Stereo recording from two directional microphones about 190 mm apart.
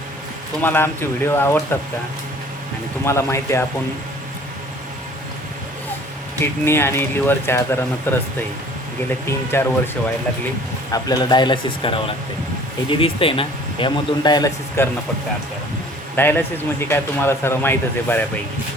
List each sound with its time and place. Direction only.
0.6 s speech: 10° left (ahead or behind)
3.1 s speech: 15° left (ahead or behind)
6.4 s speech: 10° left (ahead or behind)
9.2 s speech: 10° left (ahead or behind)
10.9 s a man's voice: 20° left (ahead or behind)
16.1 s speech: 10° left (ahead or behind)